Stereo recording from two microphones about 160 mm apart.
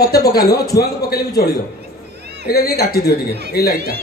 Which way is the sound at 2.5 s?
70° left (ahead or behind).